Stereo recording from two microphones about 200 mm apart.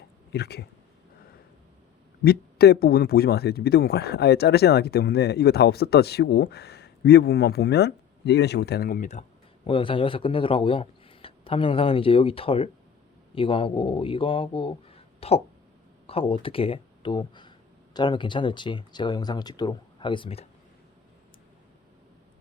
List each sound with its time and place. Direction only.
0.3 s speech: 55° left (ahead or behind)
2.2 s speech: 50° left (ahead or behind)
9.6 s speech: 25° left (ahead or behind)